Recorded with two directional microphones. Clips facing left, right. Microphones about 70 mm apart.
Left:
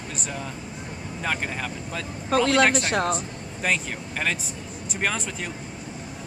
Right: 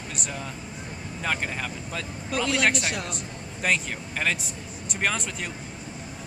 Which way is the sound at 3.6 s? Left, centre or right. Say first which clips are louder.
Even; centre.